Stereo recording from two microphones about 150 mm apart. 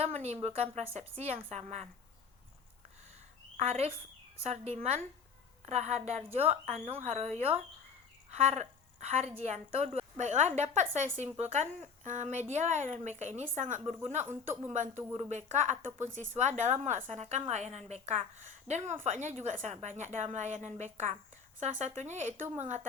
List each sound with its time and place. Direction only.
0.0 s a woman's voice: 45° right (ahead or behind)
3.6 s a woman's voice: 45° right (ahead or behind)